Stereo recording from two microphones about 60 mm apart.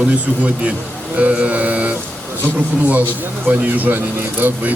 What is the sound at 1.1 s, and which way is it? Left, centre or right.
Speech, right.